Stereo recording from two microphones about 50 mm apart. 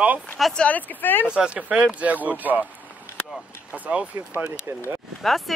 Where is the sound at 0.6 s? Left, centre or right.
Left.